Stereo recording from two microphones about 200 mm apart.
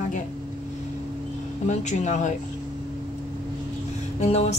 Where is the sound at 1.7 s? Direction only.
35° left (ahead or behind).